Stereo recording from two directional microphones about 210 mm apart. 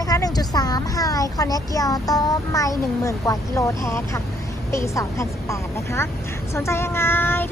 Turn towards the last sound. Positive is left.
turn(degrees=10)  # may be behind; listen again after turning